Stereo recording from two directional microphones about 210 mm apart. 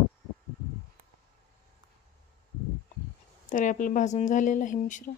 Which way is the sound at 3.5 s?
40° left (ahead or behind).